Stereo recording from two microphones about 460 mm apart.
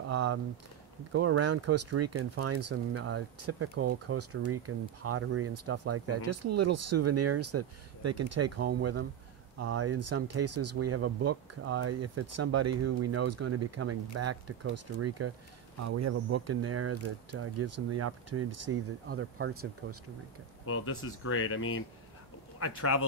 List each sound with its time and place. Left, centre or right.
0.1 s a sound: right
1.1 s speech: right
20.6 s speech: left